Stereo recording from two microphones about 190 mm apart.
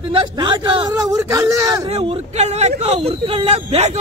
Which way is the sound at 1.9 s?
30° right (ahead or behind).